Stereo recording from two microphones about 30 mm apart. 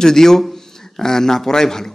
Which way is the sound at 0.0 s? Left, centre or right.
Centre.